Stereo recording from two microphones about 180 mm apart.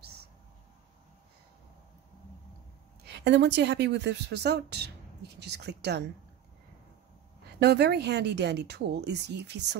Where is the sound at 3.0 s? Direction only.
70° right (ahead or behind).